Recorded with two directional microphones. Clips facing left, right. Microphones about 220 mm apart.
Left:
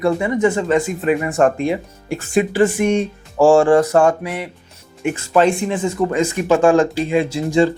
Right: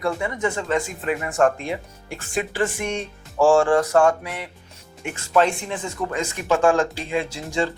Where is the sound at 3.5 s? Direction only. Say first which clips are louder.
Left 5 dB; 20° left (ahead or behind).